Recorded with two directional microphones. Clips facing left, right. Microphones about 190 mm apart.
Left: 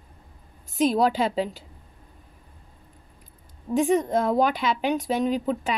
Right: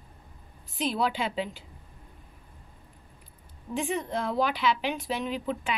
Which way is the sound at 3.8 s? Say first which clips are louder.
Left 9 dB; 45° left (ahead or behind).